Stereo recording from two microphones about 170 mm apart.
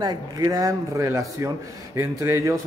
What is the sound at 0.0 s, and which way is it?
A man's voice, 25° right (ahead or behind).